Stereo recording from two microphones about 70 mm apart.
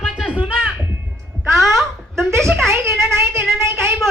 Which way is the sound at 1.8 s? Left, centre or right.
Centre.